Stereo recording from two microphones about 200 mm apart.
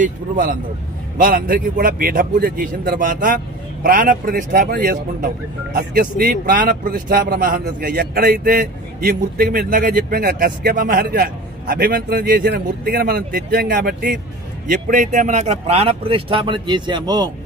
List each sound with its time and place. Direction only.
0.0 s a man's voice: 45° right (ahead or behind); by 17.2 s 20° right (ahead or behind)